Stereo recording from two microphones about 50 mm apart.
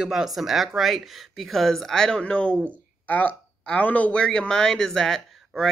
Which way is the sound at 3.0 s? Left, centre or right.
Left.